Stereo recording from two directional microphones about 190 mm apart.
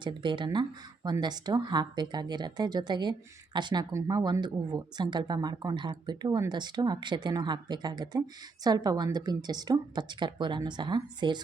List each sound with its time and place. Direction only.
0.0 s speech: 25° right (ahead or behind)